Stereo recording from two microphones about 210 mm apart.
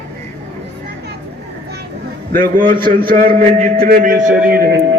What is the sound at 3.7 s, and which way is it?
Speech, 45° right (ahead or behind).